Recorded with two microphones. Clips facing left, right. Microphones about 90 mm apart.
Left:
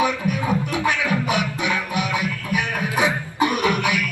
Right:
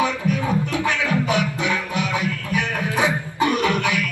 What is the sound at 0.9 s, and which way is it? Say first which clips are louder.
Music: left 1 dB; 15° left (ahead or behind).